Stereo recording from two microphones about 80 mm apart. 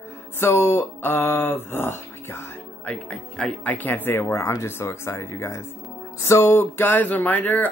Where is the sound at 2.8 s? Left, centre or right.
Centre.